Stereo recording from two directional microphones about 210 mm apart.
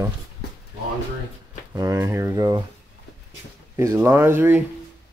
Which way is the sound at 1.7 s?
15° right (ahead or behind).